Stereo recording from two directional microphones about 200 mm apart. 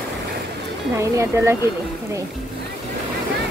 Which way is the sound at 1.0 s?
15° right (ahead or behind).